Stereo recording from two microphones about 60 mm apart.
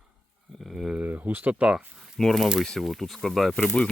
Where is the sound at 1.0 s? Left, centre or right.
Right.